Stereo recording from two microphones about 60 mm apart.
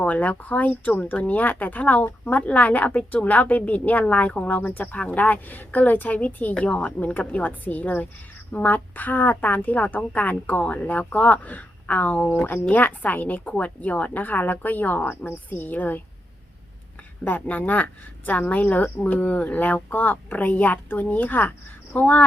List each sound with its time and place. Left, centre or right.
0.0 s a woman's voice: left
17.2 s a woman's voice: left